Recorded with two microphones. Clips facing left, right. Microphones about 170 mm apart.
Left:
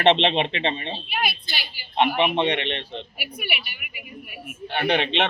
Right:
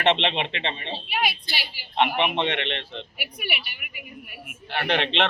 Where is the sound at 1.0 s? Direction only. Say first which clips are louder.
Right 2 dB; 10° right (ahead or behind).